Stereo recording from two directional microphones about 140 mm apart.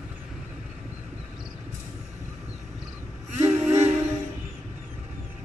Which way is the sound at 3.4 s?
50° right (ahead or behind).